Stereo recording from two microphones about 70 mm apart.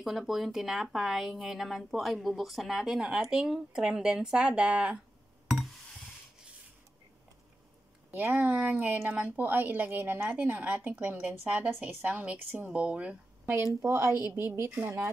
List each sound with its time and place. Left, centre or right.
0.0 s a woman's voice: centre
8.1 s speech: right
13.8 s a woman's voice: right